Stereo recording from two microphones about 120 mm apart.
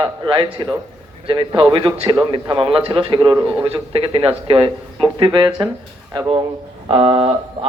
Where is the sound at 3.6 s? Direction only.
50° right (ahead or behind).